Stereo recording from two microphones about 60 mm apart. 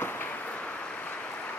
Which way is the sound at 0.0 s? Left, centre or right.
Left.